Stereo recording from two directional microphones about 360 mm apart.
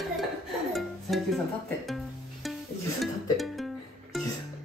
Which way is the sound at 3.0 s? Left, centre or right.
Centre.